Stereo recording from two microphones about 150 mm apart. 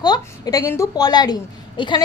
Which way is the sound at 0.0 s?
25° left (ahead or behind).